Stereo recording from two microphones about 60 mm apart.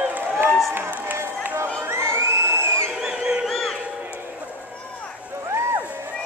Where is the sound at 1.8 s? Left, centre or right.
Right.